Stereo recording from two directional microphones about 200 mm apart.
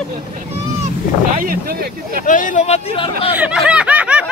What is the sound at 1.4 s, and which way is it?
Speech, 45° right (ahead or behind).